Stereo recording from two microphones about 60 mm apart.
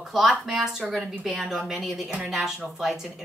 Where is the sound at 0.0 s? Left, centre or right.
Centre.